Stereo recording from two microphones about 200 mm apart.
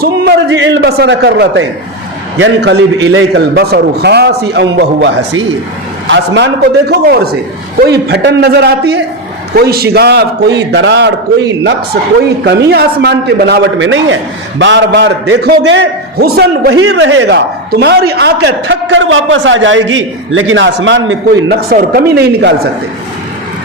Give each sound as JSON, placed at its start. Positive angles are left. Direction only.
{"t": 0.0, "sound": "speech", "side_deg": -55}
{"t": 3.1, "sound": "a man's voice", "side_deg": -75}
{"t": 3.5, "sound": "speech", "side_deg": -55}
{"t": 12.5, "sound": "speech", "side_deg": -55}
{"t": 16.8, "sound": "speech", "side_deg": -65}